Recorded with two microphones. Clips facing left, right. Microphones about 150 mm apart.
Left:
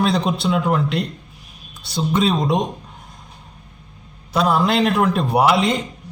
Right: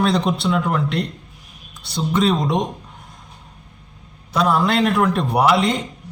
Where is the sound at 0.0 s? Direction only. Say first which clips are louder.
Even; centre (ahead or behind).